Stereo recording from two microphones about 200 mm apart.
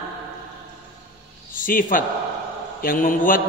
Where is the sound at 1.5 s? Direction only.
45° left (ahead or behind).